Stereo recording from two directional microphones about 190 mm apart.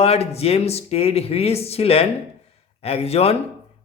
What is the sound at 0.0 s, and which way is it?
Speech, 30° left (ahead or behind).